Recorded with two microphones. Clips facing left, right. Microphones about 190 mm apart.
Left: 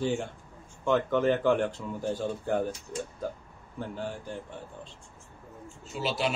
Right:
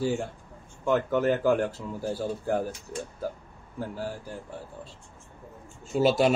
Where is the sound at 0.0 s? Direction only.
5° right (ahead or behind).